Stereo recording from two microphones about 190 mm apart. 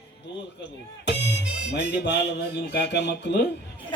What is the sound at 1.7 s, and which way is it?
Music, 65° left (ahead or behind).